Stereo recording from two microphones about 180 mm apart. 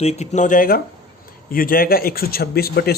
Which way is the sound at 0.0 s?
35° left (ahead or behind).